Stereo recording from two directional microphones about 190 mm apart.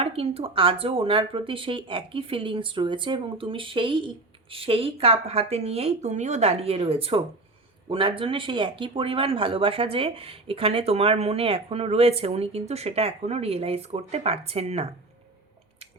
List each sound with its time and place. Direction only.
0.0 s speech: 30° right (ahead or behind)